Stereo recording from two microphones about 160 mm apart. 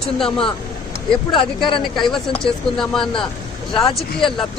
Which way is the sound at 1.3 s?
30° left (ahead or behind).